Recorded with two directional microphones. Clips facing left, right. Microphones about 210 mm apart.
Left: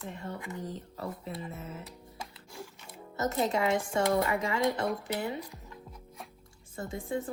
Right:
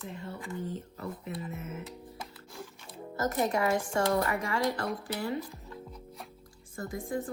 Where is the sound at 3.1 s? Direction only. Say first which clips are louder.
Even; 20° left (ahead or behind).